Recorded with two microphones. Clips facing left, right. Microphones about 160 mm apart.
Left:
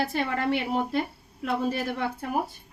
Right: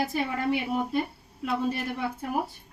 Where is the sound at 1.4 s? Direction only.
90° left.